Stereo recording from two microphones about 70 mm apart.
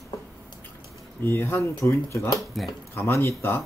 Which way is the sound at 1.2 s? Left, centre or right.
Left.